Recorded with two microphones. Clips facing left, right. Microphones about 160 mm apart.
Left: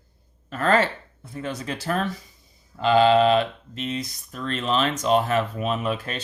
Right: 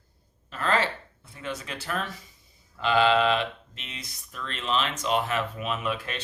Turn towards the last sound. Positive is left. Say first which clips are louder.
# left 4 dB
turn(degrees=40)  # may be behind; listen again after turning